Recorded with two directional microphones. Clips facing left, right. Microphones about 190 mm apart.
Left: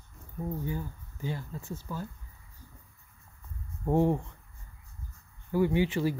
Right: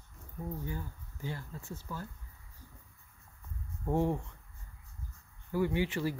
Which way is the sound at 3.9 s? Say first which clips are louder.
Left 5 dB; 25° left (ahead or behind).